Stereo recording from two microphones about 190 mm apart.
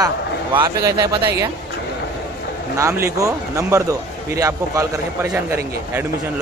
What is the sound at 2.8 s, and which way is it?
A man's voice, 15° right (ahead or behind).